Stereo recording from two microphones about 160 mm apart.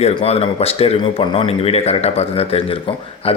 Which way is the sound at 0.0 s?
40° left (ahead or behind).